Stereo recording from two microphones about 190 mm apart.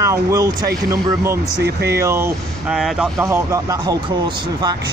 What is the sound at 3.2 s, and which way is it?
Speech, 15° right (ahead or behind).